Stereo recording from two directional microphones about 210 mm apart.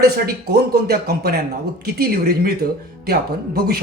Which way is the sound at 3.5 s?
45° right (ahead or behind).